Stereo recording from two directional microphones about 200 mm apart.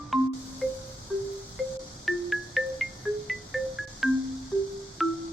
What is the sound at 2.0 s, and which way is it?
Music, centre (ahead or behind).